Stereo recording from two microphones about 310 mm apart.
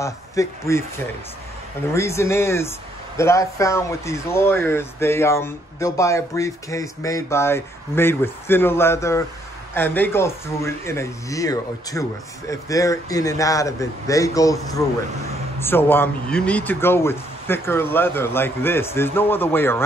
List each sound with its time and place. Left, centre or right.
0.0 s speech: centre